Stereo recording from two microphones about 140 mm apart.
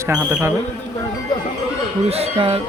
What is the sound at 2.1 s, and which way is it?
Speech, 45° right (ahead or behind).